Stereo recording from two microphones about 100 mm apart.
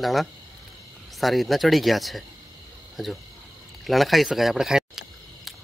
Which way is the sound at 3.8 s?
Centre (ahead or behind).